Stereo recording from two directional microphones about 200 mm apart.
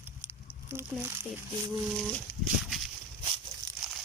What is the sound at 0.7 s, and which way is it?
Speech, 10° right (ahead or behind).